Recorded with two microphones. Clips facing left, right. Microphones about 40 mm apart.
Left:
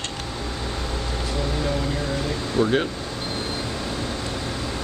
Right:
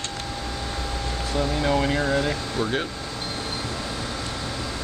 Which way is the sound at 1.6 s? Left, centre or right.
Right.